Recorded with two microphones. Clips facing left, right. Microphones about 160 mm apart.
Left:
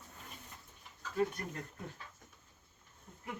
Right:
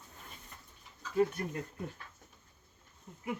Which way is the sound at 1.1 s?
5° right (ahead or behind).